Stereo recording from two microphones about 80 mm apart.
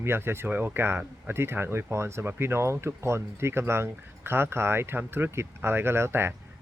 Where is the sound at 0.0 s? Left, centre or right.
Right.